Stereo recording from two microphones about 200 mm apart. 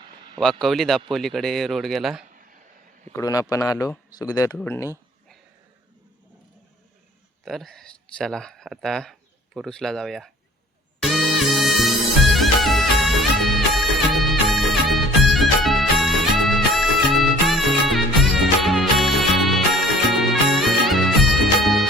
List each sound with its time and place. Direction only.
0.6 s speech: centre (ahead or behind)
2.3 s a sound: 45° right (ahead or behind)
3.1 s speech: 15° left (ahead or behind)
7.4 s speech: centre (ahead or behind)
11.0 s music: centre (ahead or behind)